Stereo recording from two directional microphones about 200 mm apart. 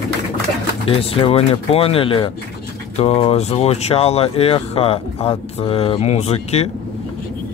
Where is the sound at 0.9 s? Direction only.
30° left (ahead or behind).